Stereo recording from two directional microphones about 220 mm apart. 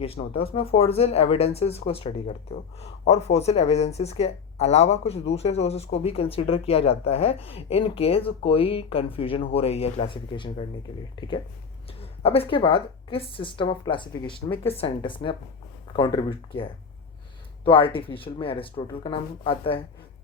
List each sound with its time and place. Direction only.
0.0 s speech: 25° left (ahead or behind)
17.7 s speech: 25° left (ahead or behind)